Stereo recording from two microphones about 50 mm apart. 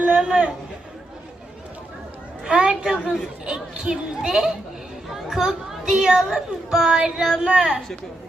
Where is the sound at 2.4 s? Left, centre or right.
Centre.